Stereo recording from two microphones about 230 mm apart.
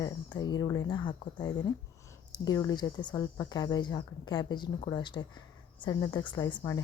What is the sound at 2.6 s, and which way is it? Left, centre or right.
A woman's voice, centre.